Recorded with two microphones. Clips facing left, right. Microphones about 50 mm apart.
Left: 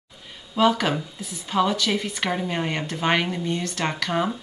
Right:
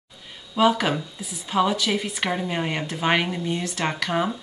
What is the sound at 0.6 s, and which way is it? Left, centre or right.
A woman's voice, centre.